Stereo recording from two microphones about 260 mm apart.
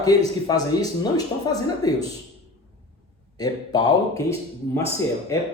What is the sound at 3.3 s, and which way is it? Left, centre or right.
Speech, centre.